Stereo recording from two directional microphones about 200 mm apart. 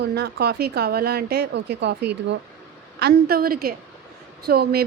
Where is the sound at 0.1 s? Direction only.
55° right (ahead or behind).